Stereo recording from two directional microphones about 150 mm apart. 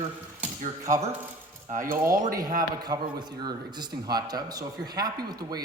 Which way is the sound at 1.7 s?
65° right (ahead or behind).